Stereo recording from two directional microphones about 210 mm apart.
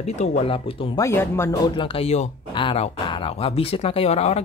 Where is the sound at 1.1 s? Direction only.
10° left (ahead or behind).